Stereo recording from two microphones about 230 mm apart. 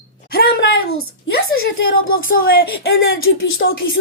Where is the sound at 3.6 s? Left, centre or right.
Left.